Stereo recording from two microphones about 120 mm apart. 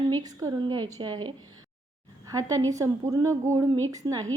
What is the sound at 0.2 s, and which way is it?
A woman's voice, 30° right (ahead or behind).